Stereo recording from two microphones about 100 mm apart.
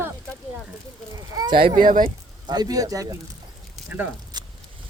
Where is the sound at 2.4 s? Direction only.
45° right (ahead or behind).